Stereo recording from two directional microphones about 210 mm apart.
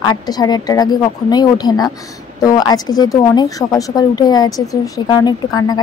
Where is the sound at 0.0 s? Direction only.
20° left (ahead or behind).